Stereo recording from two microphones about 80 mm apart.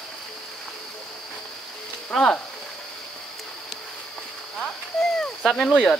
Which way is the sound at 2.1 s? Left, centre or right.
Centre.